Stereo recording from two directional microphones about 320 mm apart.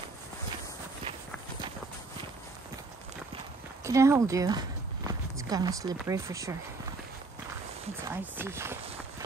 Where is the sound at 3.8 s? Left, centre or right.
Centre.